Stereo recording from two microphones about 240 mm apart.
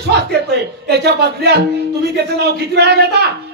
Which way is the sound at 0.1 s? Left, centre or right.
Right.